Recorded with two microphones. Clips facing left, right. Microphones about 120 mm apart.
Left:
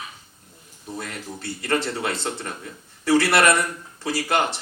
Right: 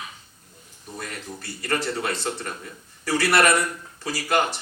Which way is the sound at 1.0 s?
25° left (ahead or behind).